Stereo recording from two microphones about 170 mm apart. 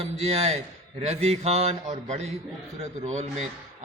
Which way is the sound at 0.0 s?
35° right (ahead or behind).